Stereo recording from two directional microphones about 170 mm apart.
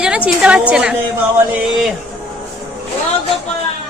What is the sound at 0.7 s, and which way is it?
Speech, 5° right (ahead or behind).